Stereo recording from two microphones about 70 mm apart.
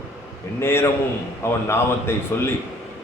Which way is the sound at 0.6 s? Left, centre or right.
Left.